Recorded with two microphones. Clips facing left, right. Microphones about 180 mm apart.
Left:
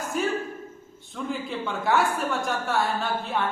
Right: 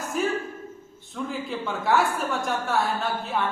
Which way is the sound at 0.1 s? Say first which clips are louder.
Right 1 dB; centre (ahead or behind).